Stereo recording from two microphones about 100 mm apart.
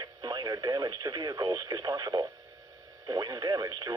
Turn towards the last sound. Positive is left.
turn(degrees=-40)  # may be behind; listen again after turning